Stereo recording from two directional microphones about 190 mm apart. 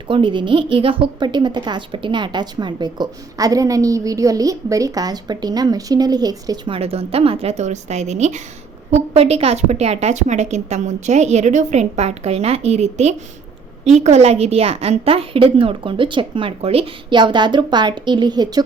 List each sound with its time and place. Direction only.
0.1 s a woman's voice: 25° right (ahead or behind)
6.7 s a woman's voice: 30° right (ahead or behind)